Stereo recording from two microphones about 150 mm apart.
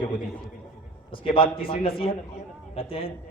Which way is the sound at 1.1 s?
35° left (ahead or behind).